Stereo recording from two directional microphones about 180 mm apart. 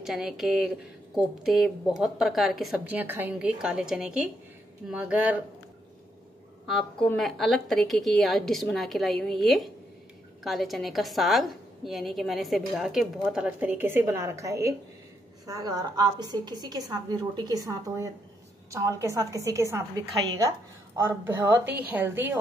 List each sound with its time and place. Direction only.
0.0 s a woman's voice: centre (ahead or behind)
6.6 s a woman's voice: centre (ahead or behind)